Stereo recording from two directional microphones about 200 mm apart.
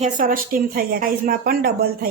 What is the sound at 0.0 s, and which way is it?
Speech, 45° right (ahead or behind).